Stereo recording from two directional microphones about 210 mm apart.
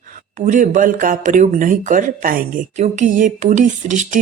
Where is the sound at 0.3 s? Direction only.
35° right (ahead or behind).